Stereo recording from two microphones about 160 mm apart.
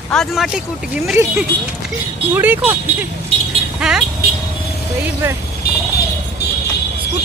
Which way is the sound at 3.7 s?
5° right (ahead or behind).